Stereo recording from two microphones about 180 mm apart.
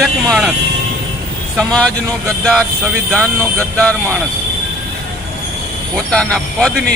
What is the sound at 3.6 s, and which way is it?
Speech, 5° left (ahead or behind).